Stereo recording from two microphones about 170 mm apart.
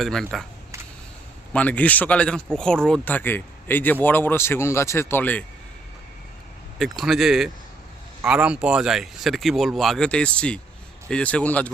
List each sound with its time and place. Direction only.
0.0 s speech: centre (ahead or behind)
1.5 s speech: 10° left (ahead or behind)
6.7 s speech: centre (ahead or behind)